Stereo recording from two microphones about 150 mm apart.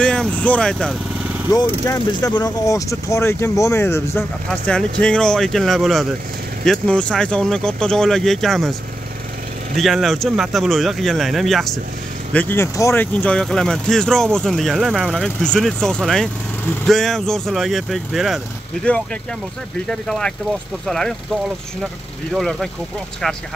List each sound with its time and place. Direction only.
0.0 s speech: 5° left (ahead or behind)
1.7 s speech: 20° left (ahead or behind)
4.5 s speech: 5° left (ahead or behind)
9.8 s speech: centre (ahead or behind)
19.9 s speech: 5° left (ahead or behind)
22.3 s speech: centre (ahead or behind)